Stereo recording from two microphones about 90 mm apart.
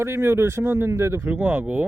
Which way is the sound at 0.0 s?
30° right (ahead or behind).